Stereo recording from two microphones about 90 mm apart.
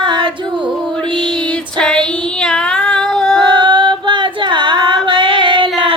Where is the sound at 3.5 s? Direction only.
60° right (ahead or behind).